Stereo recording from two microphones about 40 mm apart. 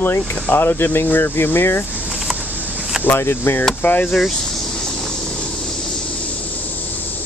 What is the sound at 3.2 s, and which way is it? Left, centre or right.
Speech, left.